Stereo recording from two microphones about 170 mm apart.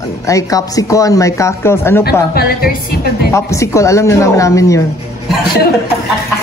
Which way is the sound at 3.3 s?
15° left (ahead or behind).